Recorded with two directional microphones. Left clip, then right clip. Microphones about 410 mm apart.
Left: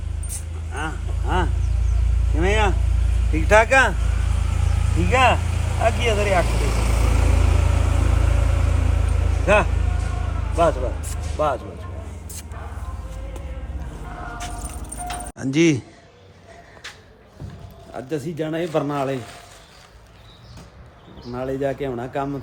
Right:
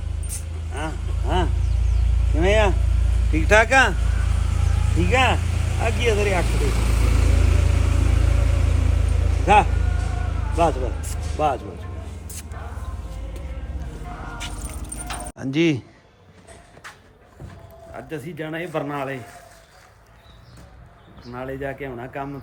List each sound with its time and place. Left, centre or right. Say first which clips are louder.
0.3 s keys jangling: left 1 dB; centre
2.3 s vehicle: right 2 dB; centre
12.3 s a sound: even; centre
14.4 s music: left 1 dB; centre
17.9 s speech: left 5 dB; centre
21.3 s speech: left 5 dB; centre